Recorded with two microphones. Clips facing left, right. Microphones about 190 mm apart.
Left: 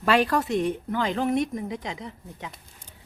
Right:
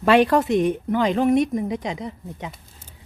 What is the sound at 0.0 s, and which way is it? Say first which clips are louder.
A woman's voice: right 6 dB; 20° right (ahead or behind).